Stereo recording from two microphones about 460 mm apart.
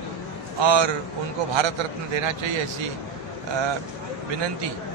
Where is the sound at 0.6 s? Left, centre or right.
Right.